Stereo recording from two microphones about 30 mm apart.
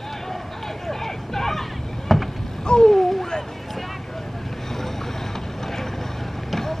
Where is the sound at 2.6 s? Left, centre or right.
Left.